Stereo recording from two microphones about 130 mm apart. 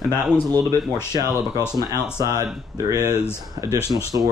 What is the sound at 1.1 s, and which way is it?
Speech, 30° right (ahead or behind).